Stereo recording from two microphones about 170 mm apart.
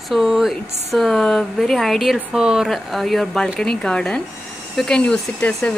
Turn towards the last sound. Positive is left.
turn(degrees=10)  # may be behind; listen again after turning